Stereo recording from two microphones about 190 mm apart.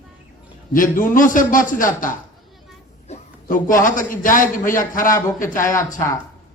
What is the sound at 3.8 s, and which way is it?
A man's voice, 45° left (ahead or behind).